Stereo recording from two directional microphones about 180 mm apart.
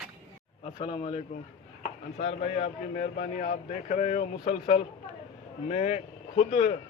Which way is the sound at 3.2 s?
50° left (ahead or behind).